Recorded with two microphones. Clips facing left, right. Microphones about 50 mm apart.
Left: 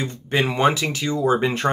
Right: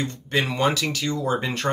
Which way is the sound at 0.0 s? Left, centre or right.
Centre.